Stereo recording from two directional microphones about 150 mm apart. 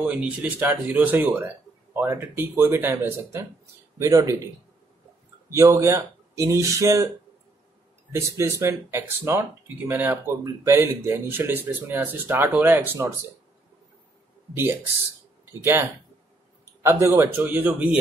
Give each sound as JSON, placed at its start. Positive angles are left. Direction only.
{"t": 0.0, "sound": "speech", "side_deg": -10}
{"t": 5.5, "sound": "speech", "side_deg": -20}
{"t": 8.1, "sound": "speech", "side_deg": -20}
{"t": 14.5, "sound": "speech", "side_deg": -15}